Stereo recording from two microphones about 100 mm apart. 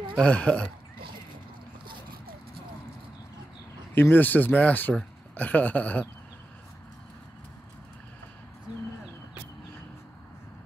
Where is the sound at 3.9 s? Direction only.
20° left (ahead or behind).